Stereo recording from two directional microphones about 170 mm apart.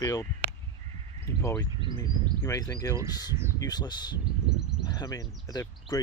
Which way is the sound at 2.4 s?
20° left (ahead or behind).